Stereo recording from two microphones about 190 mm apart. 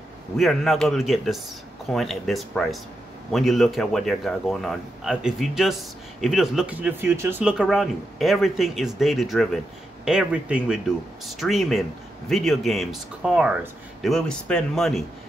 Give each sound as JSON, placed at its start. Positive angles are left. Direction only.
{"t": 0.4, "sound": "a man's voice", "side_deg": 0}